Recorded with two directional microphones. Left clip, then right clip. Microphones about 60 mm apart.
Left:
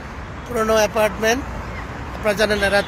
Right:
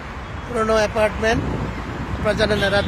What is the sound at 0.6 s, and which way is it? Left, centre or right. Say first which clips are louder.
Speech: left 1 dB; left.